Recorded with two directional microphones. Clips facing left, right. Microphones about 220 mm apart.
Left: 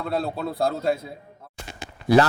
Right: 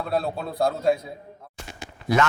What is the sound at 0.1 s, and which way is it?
Speech, centre (ahead or behind).